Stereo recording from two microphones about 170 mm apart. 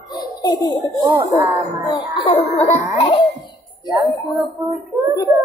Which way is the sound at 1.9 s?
30° left (ahead or behind).